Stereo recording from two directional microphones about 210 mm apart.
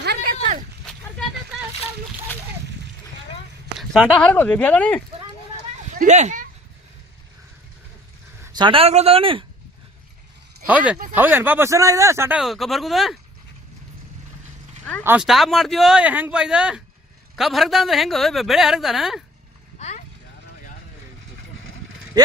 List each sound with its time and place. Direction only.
0.0 s a sound: 45° right (ahead or behind)
3.8 s speech: centre (ahead or behind)
6.0 s a sound: 35° right (ahead or behind)
8.5 s speech: 25° right (ahead or behind)
10.7 s speech: 5° right (ahead or behind)
15.0 s a man's voice: 5° right (ahead or behind)